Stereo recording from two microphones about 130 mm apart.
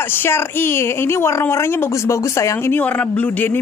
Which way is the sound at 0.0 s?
15° left (ahead or behind).